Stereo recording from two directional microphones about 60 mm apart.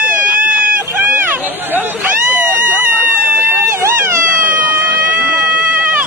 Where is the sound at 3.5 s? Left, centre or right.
Right.